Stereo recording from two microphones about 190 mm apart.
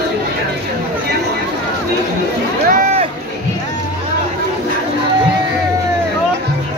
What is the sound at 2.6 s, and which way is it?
Rowboat, 45° right (ahead or behind).